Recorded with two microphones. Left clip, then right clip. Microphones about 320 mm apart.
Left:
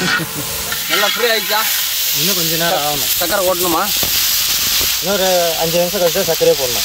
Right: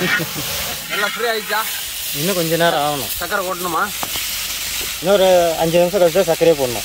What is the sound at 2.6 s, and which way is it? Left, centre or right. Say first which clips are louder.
Sizzle: right 1 dB; right.